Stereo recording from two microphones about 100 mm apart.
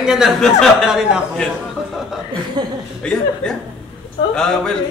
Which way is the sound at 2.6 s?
45° right (ahead or behind).